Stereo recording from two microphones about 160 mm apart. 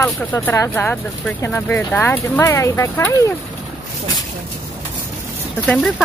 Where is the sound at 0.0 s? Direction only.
10° left (ahead or behind).